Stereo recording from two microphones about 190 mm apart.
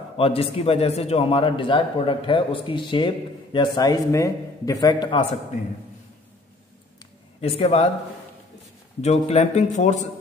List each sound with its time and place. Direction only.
0.2 s a man's voice: 30° left (ahead or behind)
7.3 s speech: 35° left (ahead or behind)
9.0 s speech: 35° left (ahead or behind)